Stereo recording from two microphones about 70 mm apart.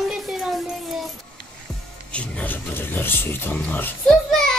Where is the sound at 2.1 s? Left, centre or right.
Centre.